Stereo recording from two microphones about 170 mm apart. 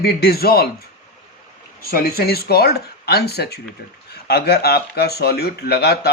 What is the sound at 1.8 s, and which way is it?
Speech, 60° left (ahead or behind).